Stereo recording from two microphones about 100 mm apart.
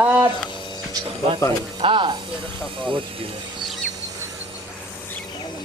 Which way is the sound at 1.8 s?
55° right (ahead or behind).